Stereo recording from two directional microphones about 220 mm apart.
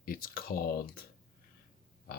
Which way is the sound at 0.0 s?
40° left (ahead or behind).